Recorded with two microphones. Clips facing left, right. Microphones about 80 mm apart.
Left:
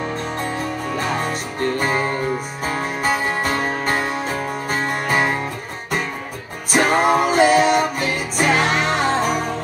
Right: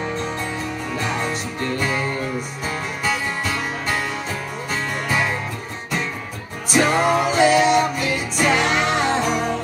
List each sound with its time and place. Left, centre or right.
0.4 s music: left
6.7 s music: left